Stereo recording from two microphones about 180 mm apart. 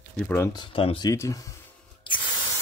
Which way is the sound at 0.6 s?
30° left (ahead or behind).